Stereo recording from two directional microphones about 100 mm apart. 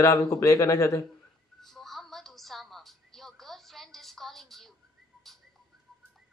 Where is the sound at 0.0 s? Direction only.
35° left (ahead or behind).